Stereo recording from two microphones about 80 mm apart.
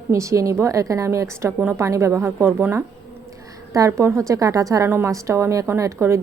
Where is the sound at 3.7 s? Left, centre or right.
Right.